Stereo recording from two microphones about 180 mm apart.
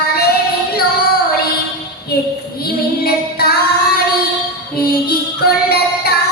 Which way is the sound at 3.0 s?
60° left (ahead or behind).